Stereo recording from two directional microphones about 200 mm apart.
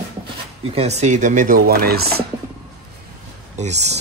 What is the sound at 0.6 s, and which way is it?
Speech, 30° right (ahead or behind).